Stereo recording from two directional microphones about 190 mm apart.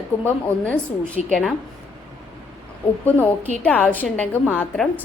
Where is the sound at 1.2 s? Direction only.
35° left (ahead or behind).